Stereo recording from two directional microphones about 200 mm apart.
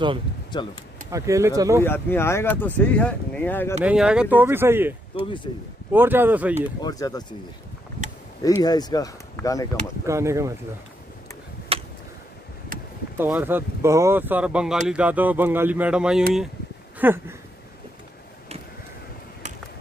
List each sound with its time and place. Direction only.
1.1 s speech: 15° right (ahead or behind)
1.8 s speech: 10° left (ahead or behind)
3.8 s speech: 5° right (ahead or behind)
6.8 s speech: 20° left (ahead or behind)
8.6 s speech: 20° left (ahead or behind)
10.0 s speech: 15° right (ahead or behind)
11.7 s a sound: 30° right (ahead or behind)
13.2 s speech: 10° right (ahead or behind)